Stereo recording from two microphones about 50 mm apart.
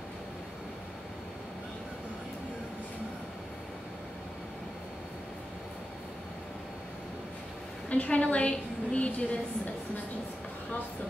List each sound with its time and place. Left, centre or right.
7.9 s a woman's voice: left